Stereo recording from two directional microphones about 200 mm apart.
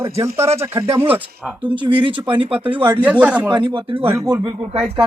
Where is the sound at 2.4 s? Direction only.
25° right (ahead or behind).